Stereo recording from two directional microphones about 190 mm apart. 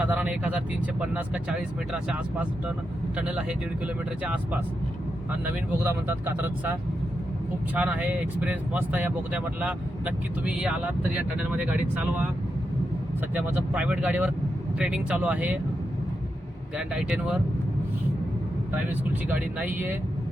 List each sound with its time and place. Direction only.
0.0 s speech: 5° right (ahead or behind)
5.8 s speech: 10° right (ahead or behind)
13.3 s speech: 5° right (ahead or behind)
16.7 s speech: 5° right (ahead or behind)
18.7 s speech: 10° right (ahead or behind)